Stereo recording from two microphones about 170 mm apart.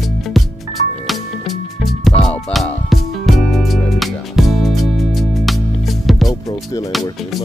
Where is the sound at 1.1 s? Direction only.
Centre (ahead or behind).